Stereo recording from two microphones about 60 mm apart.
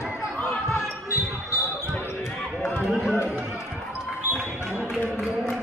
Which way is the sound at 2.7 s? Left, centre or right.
Centre.